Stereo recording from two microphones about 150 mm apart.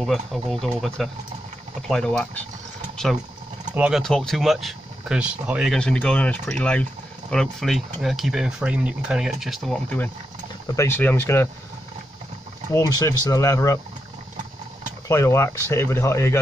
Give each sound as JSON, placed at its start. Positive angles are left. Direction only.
{"t": 0.0, "sound": "speech", "side_deg": 0}
{"t": 3.7, "sound": "speech", "side_deg": -10}
{"t": 4.0, "sound": "speech", "side_deg": 5}
{"t": 12.7, "sound": "speech", "side_deg": 20}
{"t": 15.0, "sound": "speech", "side_deg": 20}